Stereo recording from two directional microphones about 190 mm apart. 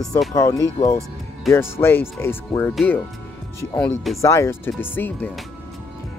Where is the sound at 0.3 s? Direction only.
20° left (ahead or behind).